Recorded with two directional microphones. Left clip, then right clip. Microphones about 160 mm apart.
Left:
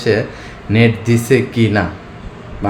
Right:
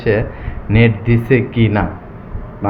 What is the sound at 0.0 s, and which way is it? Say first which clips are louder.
Speech: left 1 dB; 25° left (ahead or behind).